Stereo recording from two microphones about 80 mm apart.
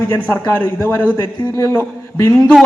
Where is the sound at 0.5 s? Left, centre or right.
Left.